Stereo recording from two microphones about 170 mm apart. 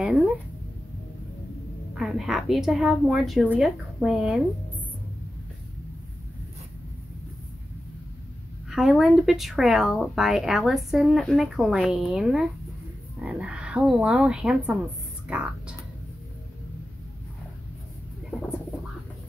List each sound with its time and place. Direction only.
0.0 s a sound: 5° right (ahead or behind)
2.0 s speech: centre (ahead or behind)
8.6 s speech: centre (ahead or behind)